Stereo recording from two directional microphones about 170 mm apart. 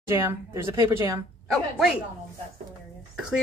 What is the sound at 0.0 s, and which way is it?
Speech, 15° right (ahead or behind).